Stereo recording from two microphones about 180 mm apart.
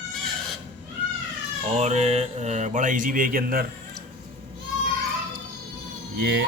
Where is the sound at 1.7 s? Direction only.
40° right (ahead or behind).